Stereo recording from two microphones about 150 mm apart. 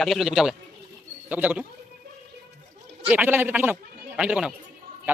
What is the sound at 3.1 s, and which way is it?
A man's voice, 10° right (ahead or behind).